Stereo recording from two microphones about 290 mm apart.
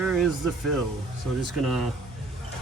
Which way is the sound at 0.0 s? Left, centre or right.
Centre.